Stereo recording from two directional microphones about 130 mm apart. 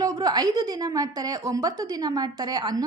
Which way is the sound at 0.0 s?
30° right (ahead or behind).